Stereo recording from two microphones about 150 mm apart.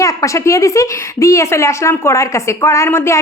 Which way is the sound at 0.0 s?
20° left (ahead or behind).